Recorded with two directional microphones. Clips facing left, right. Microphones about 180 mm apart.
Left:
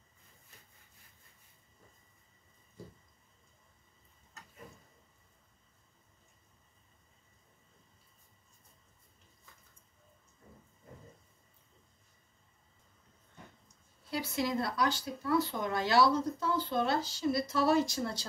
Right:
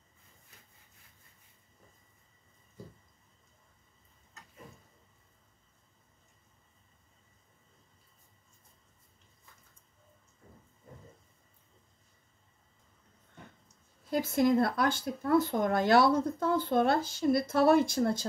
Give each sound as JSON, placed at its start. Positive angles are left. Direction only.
{"t": 14.1, "sound": "speech", "side_deg": -50}